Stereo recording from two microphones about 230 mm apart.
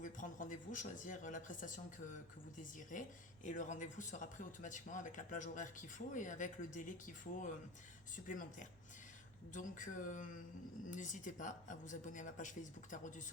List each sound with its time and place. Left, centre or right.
0.0 s a man's voice: left